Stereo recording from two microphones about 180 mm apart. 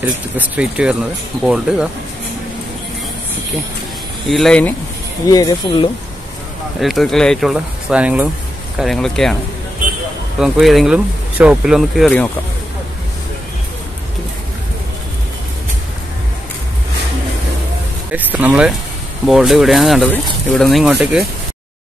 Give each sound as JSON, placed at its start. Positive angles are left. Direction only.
{"t": 0.0, "sound": "speech", "side_deg": -5}
{"t": 4.3, "sound": "speech", "side_deg": 5}
{"t": 5.2, "sound": "speech", "side_deg": 20}
{"t": 6.8, "sound": "speech", "side_deg": 0}
{"t": 10.4, "sound": "speech", "side_deg": 0}
{"t": 18.1, "sound": "speech", "side_deg": -10}